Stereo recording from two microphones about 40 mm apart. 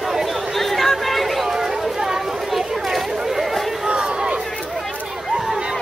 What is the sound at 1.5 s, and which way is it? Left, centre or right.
Chatter, centre.